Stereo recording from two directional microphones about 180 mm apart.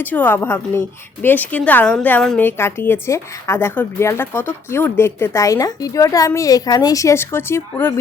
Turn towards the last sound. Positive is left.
turn(degrees=10)  # may be behind; listen again after turning